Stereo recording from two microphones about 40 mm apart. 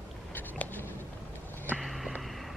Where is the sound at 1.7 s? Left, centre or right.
Centre.